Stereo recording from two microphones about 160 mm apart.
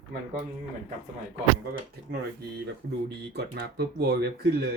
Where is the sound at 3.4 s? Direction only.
90° right.